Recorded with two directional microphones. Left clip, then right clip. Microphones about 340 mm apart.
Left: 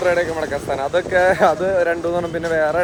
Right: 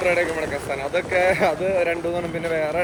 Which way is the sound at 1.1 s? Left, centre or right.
Left.